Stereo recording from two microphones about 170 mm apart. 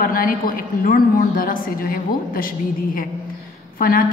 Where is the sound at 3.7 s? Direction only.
55° left (ahead or behind).